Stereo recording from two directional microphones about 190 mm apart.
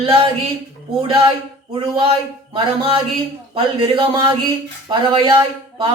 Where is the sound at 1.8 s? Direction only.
30° right (ahead or behind).